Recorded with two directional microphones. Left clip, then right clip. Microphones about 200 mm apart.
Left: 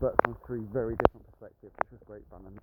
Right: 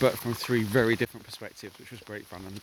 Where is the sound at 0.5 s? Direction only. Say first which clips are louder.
Right 14 dB; 70° right (ahead or behind).